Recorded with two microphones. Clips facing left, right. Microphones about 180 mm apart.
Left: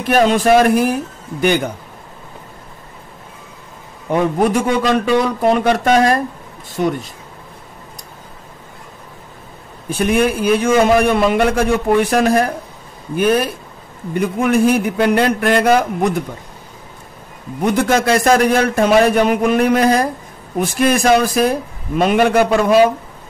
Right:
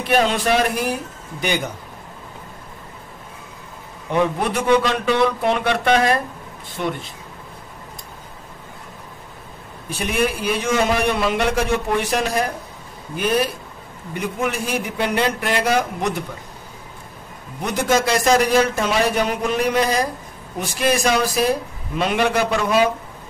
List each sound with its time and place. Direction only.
0.0 s a man's voice: 45° left (ahead or behind)
4.1 s a man's voice: 45° left (ahead or behind)
9.8 s a man's voice: 50° left (ahead or behind)
14.1 s a man's voice: 55° left (ahead or behind)
17.6 s a man's voice: 55° left (ahead or behind)